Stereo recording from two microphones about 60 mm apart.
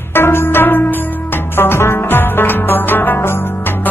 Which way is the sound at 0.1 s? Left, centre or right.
Left.